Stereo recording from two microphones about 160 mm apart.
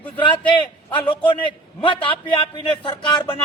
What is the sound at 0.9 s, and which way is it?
A man's voice, 30° left (ahead or behind).